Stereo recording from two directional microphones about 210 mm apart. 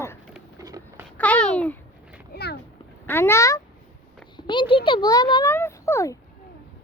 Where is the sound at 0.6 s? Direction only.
15° right (ahead or behind).